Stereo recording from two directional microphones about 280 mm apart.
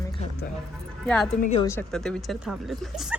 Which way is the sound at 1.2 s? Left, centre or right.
Left.